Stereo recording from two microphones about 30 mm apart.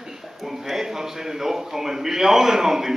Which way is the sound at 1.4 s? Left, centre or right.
Centre.